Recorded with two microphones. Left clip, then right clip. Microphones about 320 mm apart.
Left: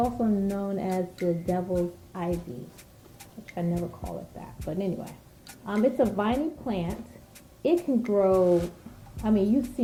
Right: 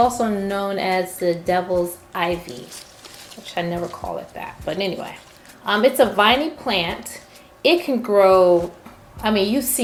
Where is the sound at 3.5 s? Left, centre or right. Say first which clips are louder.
Right 8 dB; centre.